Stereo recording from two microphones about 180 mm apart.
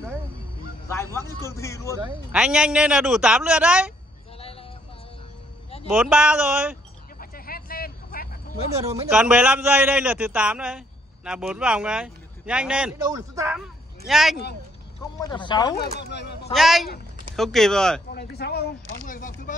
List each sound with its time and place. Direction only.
0.8 s speech: 15° left (ahead or behind)
2.3 s speech: 5° right (ahead or behind)
4.4 s vehicle: 30° left (ahead or behind)
5.9 s speech: 5° right (ahead or behind)
7.2 s vehicle: 55° left (ahead or behind)
8.7 s a man's voice: 15° right (ahead or behind)
9.1 s a man's voice: 5° right (ahead or behind)
13.0 s a man's voice: 15° right (ahead or behind)
13.6 s a sound: centre (ahead or behind)
15.1 s speech: 25° left (ahead or behind)
16.0 s speech: 70° left (ahead or behind)
16.5 s speech: centre (ahead or behind)
18.1 s speech: 65° left (ahead or behind); by 19.5 s 45° left (ahead or behind)